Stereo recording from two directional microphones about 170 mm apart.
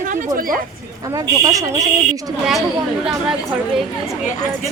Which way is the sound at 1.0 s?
20° right (ahead or behind).